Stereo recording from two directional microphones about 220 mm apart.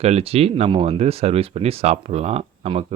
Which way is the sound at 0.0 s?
30° right (ahead or behind).